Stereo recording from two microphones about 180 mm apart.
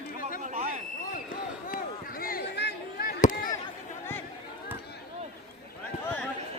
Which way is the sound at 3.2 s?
45° left (ahead or behind).